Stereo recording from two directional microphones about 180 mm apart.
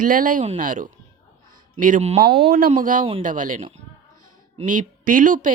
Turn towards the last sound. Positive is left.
turn(degrees=-45)  # may be behind; listen again after turning